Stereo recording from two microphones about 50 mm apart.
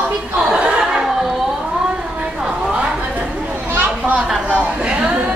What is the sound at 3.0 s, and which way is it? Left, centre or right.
Chatter, right.